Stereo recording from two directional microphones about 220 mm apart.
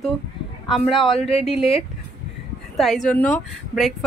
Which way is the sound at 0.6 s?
Centre (ahead or behind).